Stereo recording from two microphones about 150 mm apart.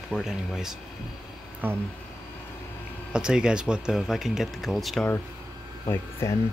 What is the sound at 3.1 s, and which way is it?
Speech, 5° right (ahead or behind).